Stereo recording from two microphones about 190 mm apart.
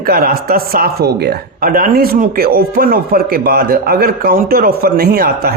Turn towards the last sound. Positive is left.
turn(degrees=-50)  # may be behind; listen again after turning